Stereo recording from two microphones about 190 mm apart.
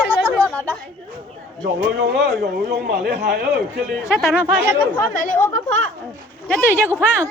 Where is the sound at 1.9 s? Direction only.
65° right (ahead or behind).